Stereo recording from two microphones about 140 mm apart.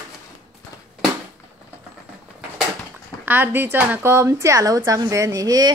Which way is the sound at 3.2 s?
15° right (ahead or behind).